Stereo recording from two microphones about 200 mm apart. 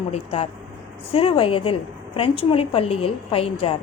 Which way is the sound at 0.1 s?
30° left (ahead or behind).